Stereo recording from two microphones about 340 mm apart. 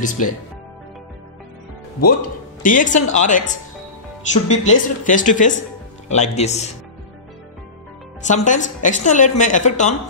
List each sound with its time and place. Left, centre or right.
0.0 s speech: left
2.6 s speech: left
8.3 s speech: left